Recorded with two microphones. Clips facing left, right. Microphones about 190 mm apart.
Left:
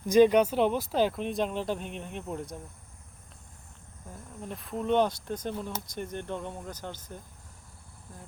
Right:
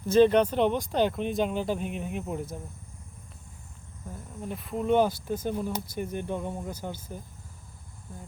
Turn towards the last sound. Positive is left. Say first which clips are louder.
# right 3 dB
turn(degrees=-10)  # may be behind; listen again after turning